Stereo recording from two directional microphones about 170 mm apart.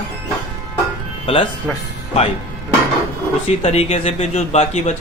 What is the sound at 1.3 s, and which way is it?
Speech, 30° left (ahead or behind).